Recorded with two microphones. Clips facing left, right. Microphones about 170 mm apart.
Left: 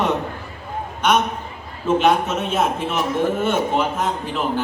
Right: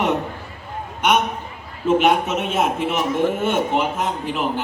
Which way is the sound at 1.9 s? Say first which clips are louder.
Even; 15° right (ahead or behind).